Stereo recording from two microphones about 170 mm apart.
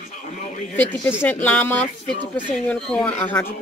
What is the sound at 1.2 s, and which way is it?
Speech, 10° left (ahead or behind).